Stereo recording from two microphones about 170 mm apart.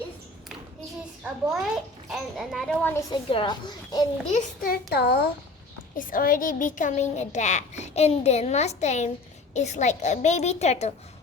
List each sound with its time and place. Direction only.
1.2 s a child's voice: 5° right (ahead or behind)
3.1 s speech: 30° left (ahead or behind)
4.3 s a child's voice: 50° left (ahead or behind); by 5.2 s 70° left (ahead or behind)
6.0 s a child's voice: 55° left (ahead or behind)